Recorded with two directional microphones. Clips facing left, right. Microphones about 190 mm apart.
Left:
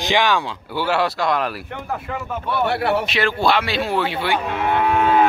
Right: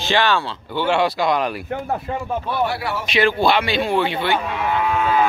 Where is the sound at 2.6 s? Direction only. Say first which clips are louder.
Left 5 dB; 60° left (ahead or behind).